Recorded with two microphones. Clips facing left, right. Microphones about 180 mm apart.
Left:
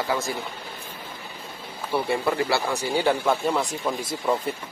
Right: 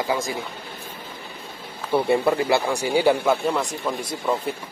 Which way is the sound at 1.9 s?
20° right (ahead or behind).